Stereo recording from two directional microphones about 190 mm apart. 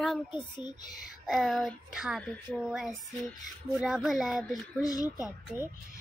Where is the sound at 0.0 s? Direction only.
Centre (ahead or behind).